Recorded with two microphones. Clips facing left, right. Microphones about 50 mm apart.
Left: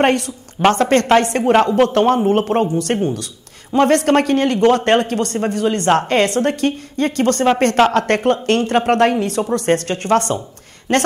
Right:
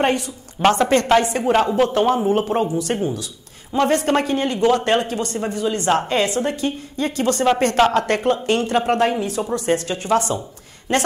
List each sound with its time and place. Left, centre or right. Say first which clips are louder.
0.0 s a woman's voice: left 4 dB; left
0.6 s a woman's voice: left 2 dB; centre
1.1 s a man's voice: left 5 dB; left
1.8 s a man's voice: left 3 dB; left